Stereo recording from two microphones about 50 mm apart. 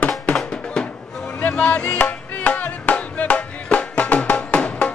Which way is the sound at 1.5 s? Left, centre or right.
Centre.